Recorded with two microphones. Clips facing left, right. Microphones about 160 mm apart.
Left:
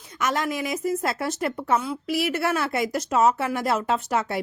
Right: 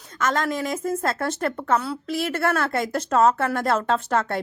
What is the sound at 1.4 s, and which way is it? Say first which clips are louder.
Speech: even; 10° left (ahead or behind).